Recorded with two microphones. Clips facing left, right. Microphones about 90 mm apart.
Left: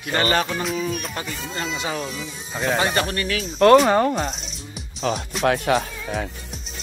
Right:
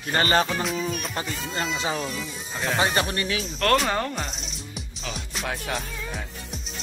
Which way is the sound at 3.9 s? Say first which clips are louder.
Left 8 dB; 15° left (ahead or behind).